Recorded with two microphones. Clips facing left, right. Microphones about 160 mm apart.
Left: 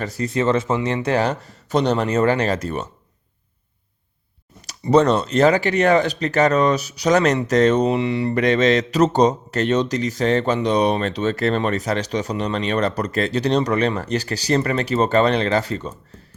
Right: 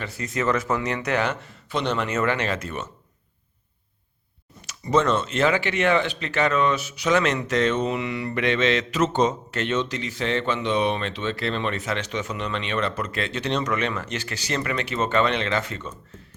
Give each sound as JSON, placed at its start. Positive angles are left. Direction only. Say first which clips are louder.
{"t": 0.0, "sound": "speech", "louder": "left 5 dB", "side_deg": 35}
{"t": 4.6, "sound": "speech", "louder": "left 6 dB", "side_deg": 35}